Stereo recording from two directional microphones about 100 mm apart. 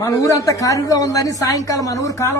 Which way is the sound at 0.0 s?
35° left (ahead or behind).